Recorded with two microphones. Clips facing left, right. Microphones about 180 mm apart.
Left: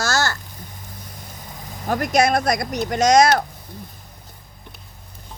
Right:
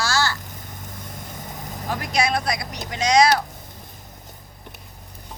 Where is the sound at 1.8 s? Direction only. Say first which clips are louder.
Left 6 dB; 50° left (ahead or behind).